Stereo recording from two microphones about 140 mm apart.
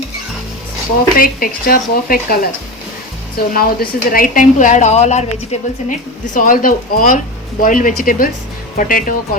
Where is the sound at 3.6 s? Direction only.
90° left; by 5.7 s 50° left (ahead or behind).